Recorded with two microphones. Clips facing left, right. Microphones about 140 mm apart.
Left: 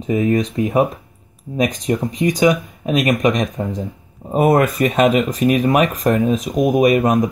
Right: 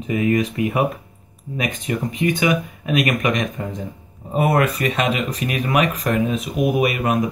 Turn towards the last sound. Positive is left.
turn(degrees=40)  # may be behind; listen again after turning